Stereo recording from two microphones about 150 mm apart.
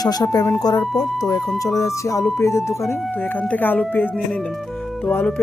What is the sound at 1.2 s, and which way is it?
Speech, 25° left (ahead or behind).